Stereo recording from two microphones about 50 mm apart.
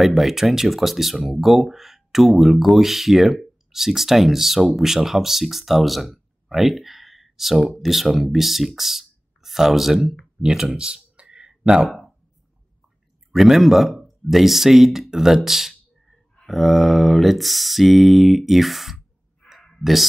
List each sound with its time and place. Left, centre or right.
0.0 s speech: centre
10.4 s speech: centre
11.1 s a sound: centre
11.8 s speech: centre
13.3 s speech: centre